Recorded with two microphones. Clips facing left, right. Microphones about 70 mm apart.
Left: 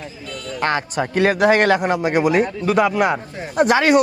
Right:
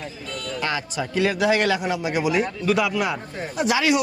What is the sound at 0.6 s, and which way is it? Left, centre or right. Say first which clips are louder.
Speech: left 7 dB; left.